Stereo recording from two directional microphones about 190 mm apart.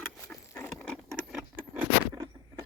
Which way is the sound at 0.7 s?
5° left (ahead or behind).